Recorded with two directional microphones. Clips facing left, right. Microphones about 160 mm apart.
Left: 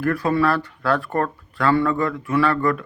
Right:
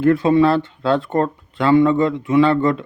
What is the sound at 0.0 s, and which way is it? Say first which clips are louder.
A man's voice: right 6 dB; 25° right (ahead or behind).